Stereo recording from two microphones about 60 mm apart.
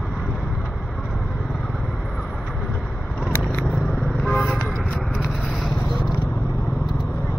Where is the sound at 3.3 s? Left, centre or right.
Centre.